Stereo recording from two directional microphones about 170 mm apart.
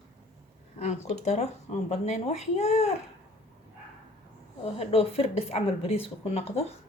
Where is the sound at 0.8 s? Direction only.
40° left (ahead or behind).